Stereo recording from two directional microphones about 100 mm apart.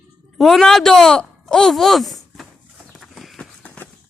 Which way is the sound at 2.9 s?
Centre (ahead or behind).